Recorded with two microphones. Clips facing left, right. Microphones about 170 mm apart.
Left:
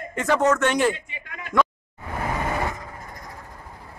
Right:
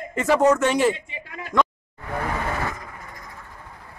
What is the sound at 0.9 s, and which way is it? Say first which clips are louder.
Speech: right 3 dB; 30° right (ahead or behind).